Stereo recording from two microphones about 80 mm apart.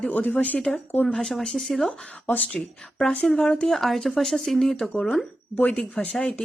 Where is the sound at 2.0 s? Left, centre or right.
Centre.